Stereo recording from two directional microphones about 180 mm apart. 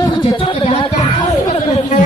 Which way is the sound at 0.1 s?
30° left (ahead or behind).